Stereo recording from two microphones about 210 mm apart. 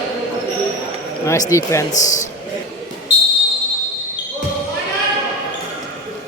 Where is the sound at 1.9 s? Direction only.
35° left (ahead or behind).